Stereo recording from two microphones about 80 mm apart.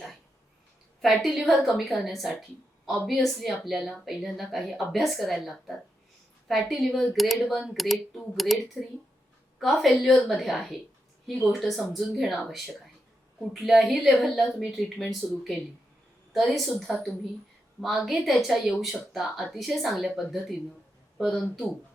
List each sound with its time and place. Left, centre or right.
1.0 s a woman's voice: centre
13.5 s a woman's voice: centre
15.2 s speech: centre
16.3 s a woman's voice: centre